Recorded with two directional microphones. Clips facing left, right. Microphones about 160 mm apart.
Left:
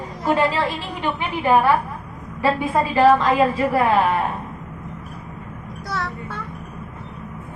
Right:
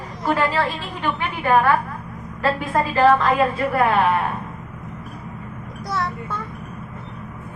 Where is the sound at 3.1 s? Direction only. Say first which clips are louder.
Left 1 dB; 10° left (ahead or behind).